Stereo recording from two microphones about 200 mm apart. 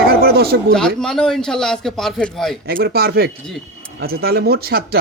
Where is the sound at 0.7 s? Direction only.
5° left (ahead or behind).